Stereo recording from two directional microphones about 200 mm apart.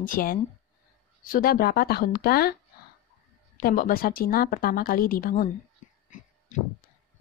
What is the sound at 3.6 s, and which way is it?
A woman's voice, 45° left (ahead or behind).